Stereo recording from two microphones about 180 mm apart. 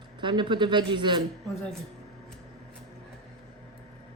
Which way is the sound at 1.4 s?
Centre (ahead or behind).